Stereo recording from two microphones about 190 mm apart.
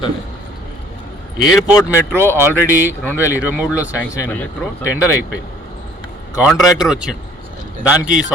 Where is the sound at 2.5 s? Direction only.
10° left (ahead or behind).